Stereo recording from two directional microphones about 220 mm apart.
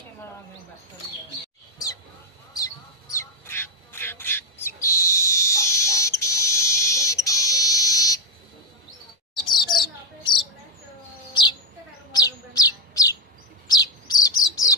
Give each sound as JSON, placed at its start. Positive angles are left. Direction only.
{"t": 2.5, "sound": "bird", "side_deg": 15}
{"t": 5.1, "sound": "frog", "side_deg": 15}
{"t": 9.5, "sound": "chirp", "side_deg": 20}
{"t": 12.1, "sound": "chirp", "side_deg": 15}
{"t": 13.7, "sound": "bird", "side_deg": 15}